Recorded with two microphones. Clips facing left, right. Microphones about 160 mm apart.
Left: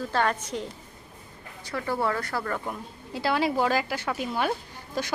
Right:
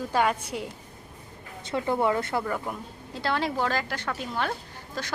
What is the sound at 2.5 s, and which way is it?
Speech, 5° right (ahead or behind).